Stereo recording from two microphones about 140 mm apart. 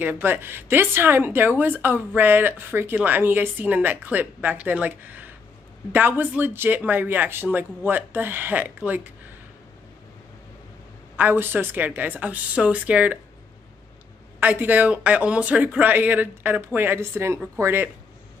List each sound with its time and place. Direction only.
0.0 s speech: 15° right (ahead or behind)
11.1 s speech: 15° right (ahead or behind)
14.4 s speech: 10° right (ahead or behind)